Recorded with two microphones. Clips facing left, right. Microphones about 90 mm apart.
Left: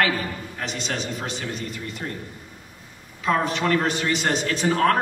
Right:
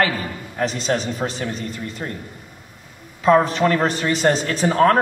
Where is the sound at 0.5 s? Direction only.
35° right (ahead or behind).